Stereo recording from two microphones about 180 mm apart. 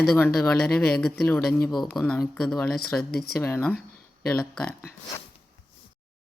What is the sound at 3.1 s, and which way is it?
Speech, 60° left (ahead or behind).